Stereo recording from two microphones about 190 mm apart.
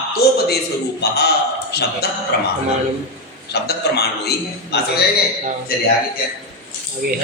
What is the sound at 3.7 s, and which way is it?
Speech, 60° left (ahead or behind).